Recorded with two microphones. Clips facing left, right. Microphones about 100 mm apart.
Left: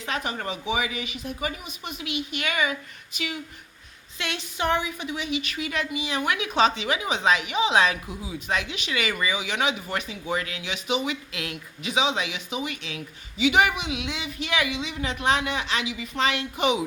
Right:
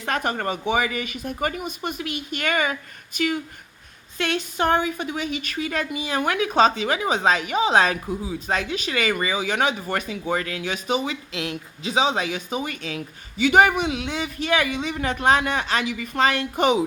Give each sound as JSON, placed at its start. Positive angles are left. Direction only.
{"t": 0.0, "sound": "a woman's voice", "side_deg": -50}